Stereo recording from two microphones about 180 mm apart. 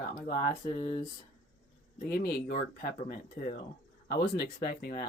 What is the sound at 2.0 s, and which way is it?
Speech, 55° left (ahead or behind).